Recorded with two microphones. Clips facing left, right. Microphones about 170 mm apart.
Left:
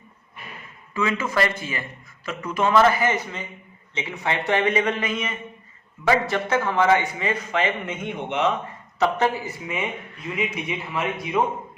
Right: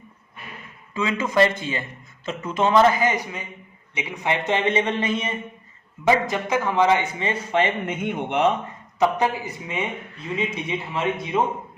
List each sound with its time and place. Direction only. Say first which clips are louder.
0.9 s speech: right 3 dB; 20° right (ahead or behind)
6.1 s a man's voice: right 1 dB; 15° right (ahead or behind)
7.6 s a man's voice: right 2 dB; 45° right (ahead or behind)
9.0 s speech: right 1 dB; 15° right (ahead or behind)